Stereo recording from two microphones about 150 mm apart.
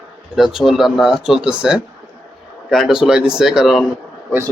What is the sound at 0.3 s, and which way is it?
Speech, centre (ahead or behind).